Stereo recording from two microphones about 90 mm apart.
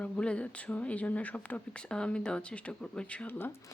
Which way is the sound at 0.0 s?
10° left (ahead or behind).